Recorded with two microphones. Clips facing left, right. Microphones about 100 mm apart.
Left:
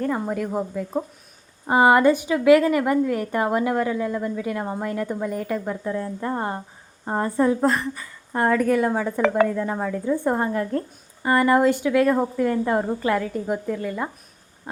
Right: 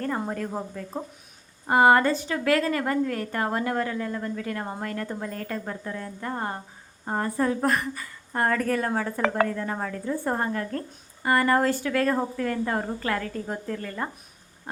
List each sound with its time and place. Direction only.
0.0 s a woman's voice: 10° left (ahead or behind); by 8.0 s 25° left (ahead or behind)
8.3 s speech: 10° left (ahead or behind)